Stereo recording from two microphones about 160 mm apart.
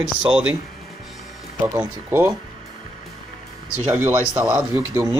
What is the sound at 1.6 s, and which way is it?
Speech, 15° right (ahead or behind).